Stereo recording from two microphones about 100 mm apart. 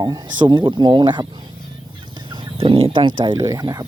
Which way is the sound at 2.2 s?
50° right (ahead or behind).